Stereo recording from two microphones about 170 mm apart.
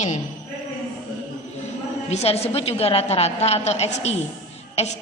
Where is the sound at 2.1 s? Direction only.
35° left (ahead or behind).